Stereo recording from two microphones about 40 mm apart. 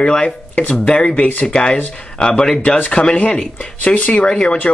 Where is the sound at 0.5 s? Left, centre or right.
Left.